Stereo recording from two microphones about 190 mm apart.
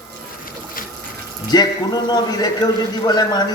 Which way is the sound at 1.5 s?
20° left (ahead or behind).